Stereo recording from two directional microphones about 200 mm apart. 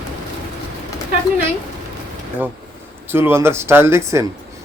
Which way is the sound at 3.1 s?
10° right (ahead or behind).